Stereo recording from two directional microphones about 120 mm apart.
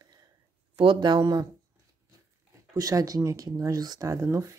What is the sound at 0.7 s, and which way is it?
Speech, 45° right (ahead or behind).